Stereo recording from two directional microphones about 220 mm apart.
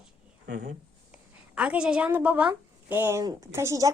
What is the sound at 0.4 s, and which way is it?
Speech, 50° right (ahead or behind).